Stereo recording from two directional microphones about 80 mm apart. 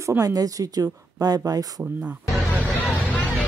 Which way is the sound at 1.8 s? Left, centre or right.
Centre.